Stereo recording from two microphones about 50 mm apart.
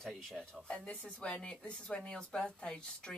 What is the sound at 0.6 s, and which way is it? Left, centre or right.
A woman's voice, centre.